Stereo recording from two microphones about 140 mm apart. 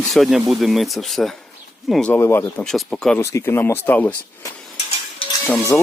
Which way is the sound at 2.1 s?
20° left (ahead or behind).